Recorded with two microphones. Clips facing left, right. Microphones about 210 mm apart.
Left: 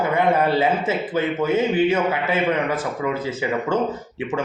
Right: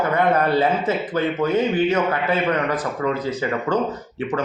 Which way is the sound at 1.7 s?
10° left (ahead or behind).